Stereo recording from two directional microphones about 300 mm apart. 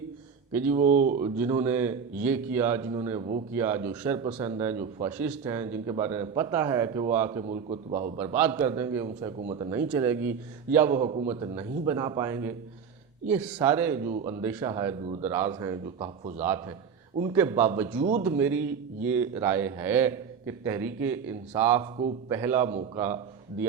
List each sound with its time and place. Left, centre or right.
0.7 s speech: right
1.4 s a man's voice: centre
5.1 s a man's voice: centre
10.9 s a man's voice: centre
14.0 s speech: right
14.4 s a man's voice: centre
16.4 s a man's voice: centre